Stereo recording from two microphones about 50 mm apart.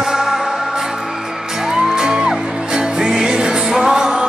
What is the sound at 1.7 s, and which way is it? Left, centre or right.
Music, centre.